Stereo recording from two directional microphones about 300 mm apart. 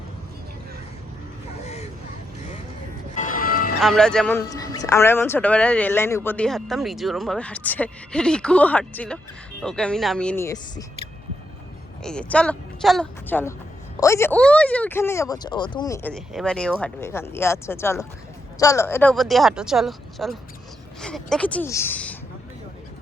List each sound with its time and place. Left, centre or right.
1.6 s a sound: left
3.2 s music: left
3.8 s speech: centre
12.0 s speech: centre